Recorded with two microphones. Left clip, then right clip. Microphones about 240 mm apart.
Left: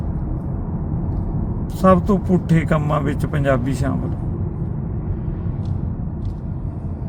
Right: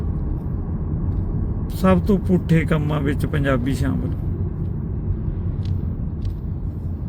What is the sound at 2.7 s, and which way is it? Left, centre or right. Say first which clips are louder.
Speech: left 3 dB; left.